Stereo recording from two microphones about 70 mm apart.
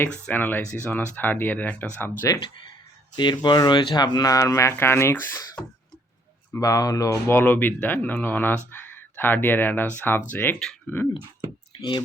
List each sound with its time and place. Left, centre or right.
0.0 s speech: left
3.2 s speech: left
4.8 s speech: left
6.5 s speech: left
7.3 s speech: left
10.8 s a sound: left